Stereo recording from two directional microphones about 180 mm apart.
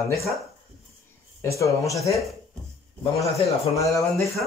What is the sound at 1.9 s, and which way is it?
Speech, 15° left (ahead or behind).